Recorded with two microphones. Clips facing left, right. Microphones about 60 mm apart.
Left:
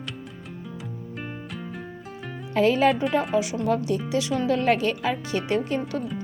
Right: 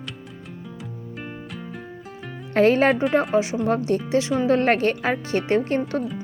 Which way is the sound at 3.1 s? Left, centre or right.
Right.